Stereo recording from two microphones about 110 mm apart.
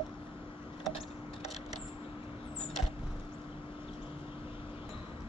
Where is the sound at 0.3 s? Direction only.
55° left (ahead or behind).